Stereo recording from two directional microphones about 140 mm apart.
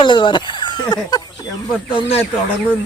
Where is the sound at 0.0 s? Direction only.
35° left (ahead or behind).